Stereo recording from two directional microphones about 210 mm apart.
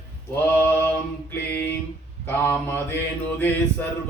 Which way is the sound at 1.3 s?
10° left (ahead or behind).